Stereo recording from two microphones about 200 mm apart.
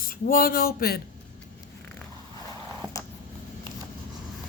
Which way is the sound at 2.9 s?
15° left (ahead or behind).